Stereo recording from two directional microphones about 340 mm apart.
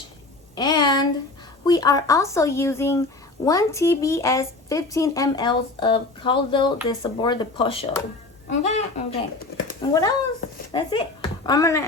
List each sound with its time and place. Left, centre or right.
0.5 s a woman's voice: centre